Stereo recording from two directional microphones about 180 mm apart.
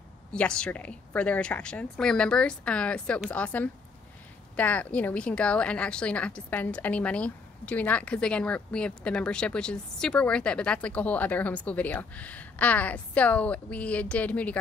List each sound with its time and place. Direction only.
0.3 s a woman's voice: 5° left (ahead or behind)